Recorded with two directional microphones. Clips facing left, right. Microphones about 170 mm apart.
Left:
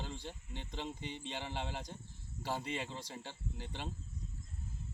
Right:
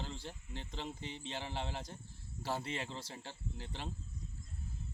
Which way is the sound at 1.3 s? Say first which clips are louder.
Right 1 dB; 15° left (ahead or behind).